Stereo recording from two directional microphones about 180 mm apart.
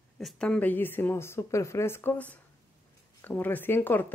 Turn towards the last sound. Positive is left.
turn(degrees=10)  # may be behind; listen again after turning